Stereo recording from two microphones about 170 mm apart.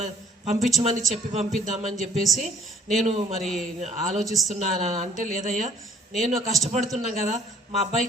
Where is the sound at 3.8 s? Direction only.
40° right (ahead or behind).